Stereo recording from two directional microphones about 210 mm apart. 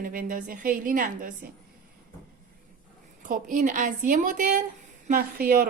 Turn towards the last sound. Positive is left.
turn(degrees=-45)  # may be behind; listen again after turning